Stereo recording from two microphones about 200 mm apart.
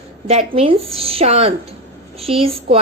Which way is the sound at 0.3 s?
30° right (ahead or behind).